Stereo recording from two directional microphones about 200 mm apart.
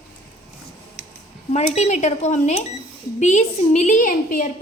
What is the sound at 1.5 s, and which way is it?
A woman's voice, 35° left (ahead or behind).